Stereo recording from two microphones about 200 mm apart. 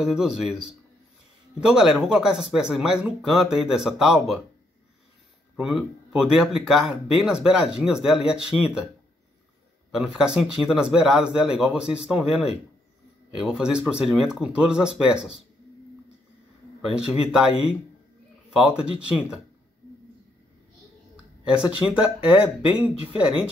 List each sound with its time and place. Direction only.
0.0 s speech: 5° right (ahead or behind)
5.6 s speech: centre (ahead or behind)
9.8 s speech: 5° right (ahead or behind)
16.9 s speech: 5° right (ahead or behind)
21.5 s speech: 5° right (ahead or behind)